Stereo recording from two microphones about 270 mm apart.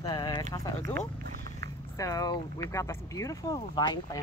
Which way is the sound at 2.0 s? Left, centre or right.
Centre.